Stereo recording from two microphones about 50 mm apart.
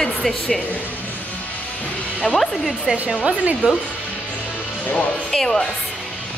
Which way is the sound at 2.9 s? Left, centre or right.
Centre.